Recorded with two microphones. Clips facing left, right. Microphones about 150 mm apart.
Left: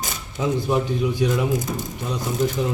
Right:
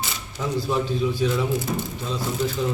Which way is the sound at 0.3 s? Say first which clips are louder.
Left 3 dB; 20° left (ahead or behind).